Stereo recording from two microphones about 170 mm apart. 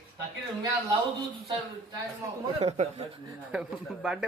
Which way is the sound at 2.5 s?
40° right (ahead or behind).